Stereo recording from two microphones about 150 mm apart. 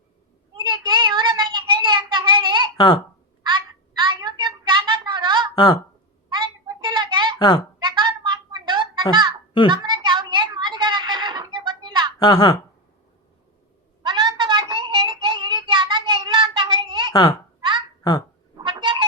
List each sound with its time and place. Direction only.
0.5 s child singing: 30° right (ahead or behind)
2.7 s speech: 30° left (ahead or behind)
3.4 s a sound: 30° right (ahead or behind)
7.3 s speech: 30° left (ahead or behind)
7.8 s a sound: 30° right (ahead or behind)
12.2 s a woman's voice: 30° left (ahead or behind)
14.0 s child singing: 30° right (ahead or behind)
17.1 s a child's voice: 35° left (ahead or behind)
17.6 s a sound: 30° right (ahead or behind)
18.6 s cat: 35° right (ahead or behind)